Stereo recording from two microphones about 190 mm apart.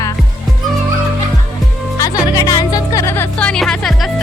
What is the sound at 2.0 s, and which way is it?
Speech, 20° left (ahead or behind).